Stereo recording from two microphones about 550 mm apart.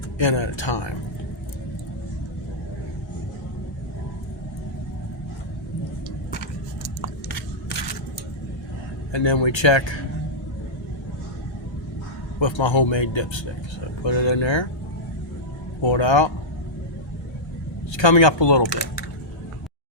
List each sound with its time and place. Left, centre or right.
0.2 s speech: left
9.1 s speech: left
12.4 s speech: left
15.8 s speech: left
17.9 s speech: left